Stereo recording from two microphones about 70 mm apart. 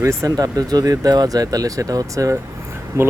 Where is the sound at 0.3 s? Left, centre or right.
Right.